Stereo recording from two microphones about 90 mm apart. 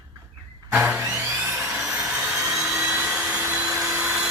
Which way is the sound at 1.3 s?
20° right (ahead or behind).